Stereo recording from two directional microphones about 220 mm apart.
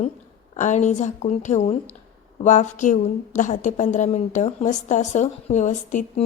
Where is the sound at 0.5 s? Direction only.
35° left (ahead or behind).